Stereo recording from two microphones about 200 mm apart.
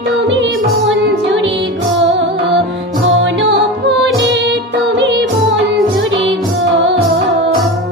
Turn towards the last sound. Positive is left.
turn(degrees=-70)  # may be behind; listen again after turning